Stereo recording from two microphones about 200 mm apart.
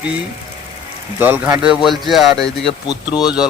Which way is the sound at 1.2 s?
10° right (ahead or behind).